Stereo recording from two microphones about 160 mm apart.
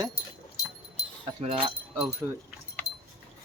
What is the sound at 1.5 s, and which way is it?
Speech, 5° right (ahead or behind).